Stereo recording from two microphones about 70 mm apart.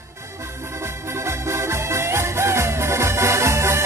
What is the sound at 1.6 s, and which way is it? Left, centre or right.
Music, right.